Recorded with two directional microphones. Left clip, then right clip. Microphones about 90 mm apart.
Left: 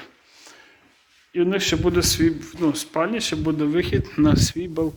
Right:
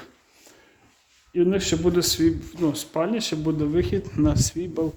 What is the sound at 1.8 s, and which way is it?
Speech, 35° right (ahead or behind).